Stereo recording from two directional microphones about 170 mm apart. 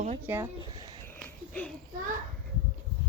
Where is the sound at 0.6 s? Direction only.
25° right (ahead or behind).